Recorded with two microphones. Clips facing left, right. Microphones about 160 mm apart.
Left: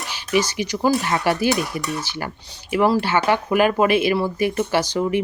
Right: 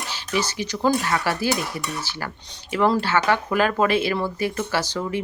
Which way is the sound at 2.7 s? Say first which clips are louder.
Left 2 dB; 10° left (ahead or behind).